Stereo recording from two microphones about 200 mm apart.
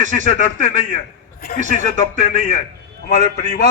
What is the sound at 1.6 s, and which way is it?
Speech, 40° left (ahead or behind).